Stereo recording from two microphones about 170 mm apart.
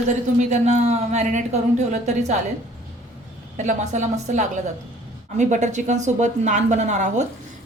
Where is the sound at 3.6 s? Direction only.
45° right (ahead or behind).